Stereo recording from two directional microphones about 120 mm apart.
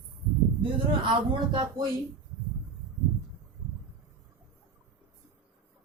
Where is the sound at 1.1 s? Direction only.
40° right (ahead or behind).